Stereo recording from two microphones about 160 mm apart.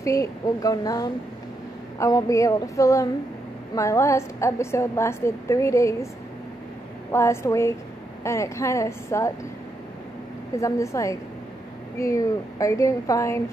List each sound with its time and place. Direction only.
0.0 s a woman's voice: 20° left (ahead or behind)
7.1 s a woman's voice: 15° left (ahead or behind)
10.5 s speech: 20° left (ahead or behind)